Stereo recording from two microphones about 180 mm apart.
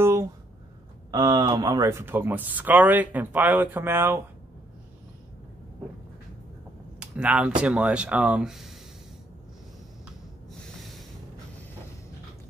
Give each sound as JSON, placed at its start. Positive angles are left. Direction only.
{"t": 0.0, "sound": "a sound", "side_deg": -15}
{"t": 1.1, "sound": "speech", "side_deg": -20}
{"t": 7.0, "sound": "speech", "side_deg": -5}
{"t": 10.5, "sound": "snort", "side_deg": 0}